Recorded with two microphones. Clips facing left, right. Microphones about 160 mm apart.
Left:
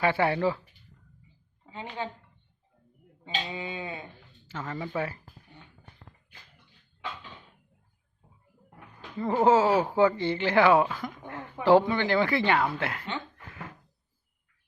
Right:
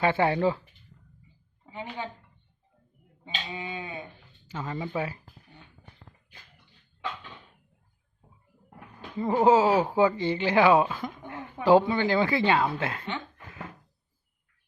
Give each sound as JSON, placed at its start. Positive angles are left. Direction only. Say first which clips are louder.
{"t": 0.0, "sound": "speech", "louder": "right 1 dB", "side_deg": -20}
{"t": 3.5, "sound": "sheep", "louder": "even", "side_deg": 25}
{"t": 4.4, "sound": "speech", "louder": "right 1 dB", "side_deg": -20}
{"t": 9.1, "sound": "speech", "louder": "right 1 dB", "side_deg": -20}